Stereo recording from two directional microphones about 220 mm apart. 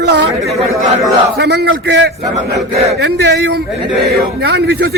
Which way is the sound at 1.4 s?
50° right (ahead or behind).